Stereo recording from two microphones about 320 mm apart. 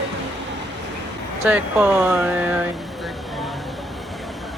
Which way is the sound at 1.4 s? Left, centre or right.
Centre.